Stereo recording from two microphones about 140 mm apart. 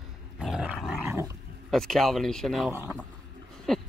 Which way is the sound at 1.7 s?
5° left (ahead or behind).